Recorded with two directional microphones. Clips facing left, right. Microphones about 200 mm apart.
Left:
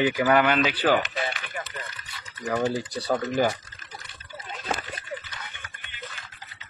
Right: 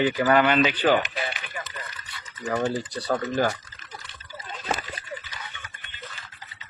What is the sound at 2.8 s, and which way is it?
Speech, 10° left (ahead or behind).